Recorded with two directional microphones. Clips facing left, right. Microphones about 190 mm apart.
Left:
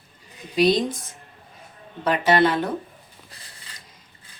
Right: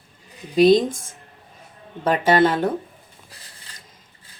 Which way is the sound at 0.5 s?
50° right (ahead or behind).